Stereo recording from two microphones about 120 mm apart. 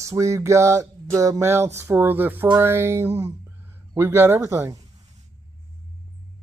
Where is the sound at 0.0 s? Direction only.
25° right (ahead or behind).